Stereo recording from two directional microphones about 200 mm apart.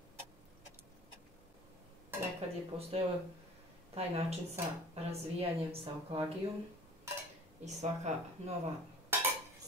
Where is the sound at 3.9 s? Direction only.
30° right (ahead or behind).